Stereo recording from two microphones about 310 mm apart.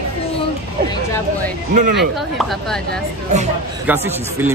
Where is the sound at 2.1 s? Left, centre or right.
Centre.